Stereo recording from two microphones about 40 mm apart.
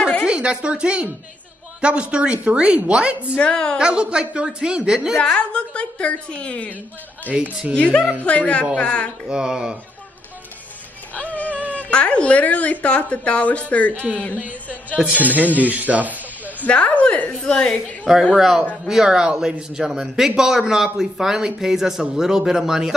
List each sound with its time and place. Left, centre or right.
0.3 s a woman's voice: right
3.3 s a woman's voice: left
3.7 s speech: right
5.1 s a woman's voice: left
7.3 s speech: right
7.7 s a woman's voice: left
9.3 s speech: right
11.3 s a sound: left
11.9 s a woman's voice: left
15.1 s speech: right
16.6 s a woman's voice: left
18.3 s speech: centre